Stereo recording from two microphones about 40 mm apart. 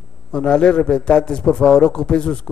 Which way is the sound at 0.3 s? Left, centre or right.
Left.